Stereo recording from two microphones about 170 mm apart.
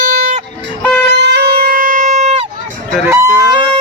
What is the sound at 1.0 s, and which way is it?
Music, 80° right.